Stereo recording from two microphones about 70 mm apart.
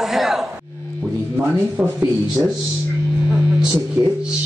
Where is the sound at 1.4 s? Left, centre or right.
Right.